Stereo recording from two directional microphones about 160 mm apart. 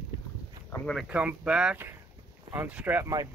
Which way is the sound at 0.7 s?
5° left (ahead or behind).